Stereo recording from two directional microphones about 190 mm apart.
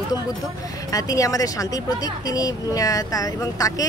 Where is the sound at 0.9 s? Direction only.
15° left (ahead or behind).